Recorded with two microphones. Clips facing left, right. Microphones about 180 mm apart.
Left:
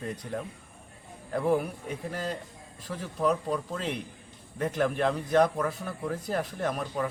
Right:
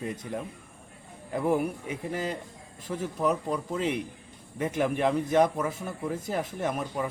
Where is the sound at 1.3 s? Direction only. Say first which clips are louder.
Even; 10° right (ahead or behind).